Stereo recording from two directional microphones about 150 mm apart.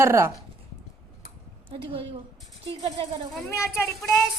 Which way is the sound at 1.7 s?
40° right (ahead or behind).